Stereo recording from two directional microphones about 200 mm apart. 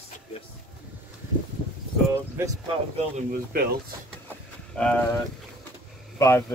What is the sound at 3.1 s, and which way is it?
Speech, 45° right (ahead or behind).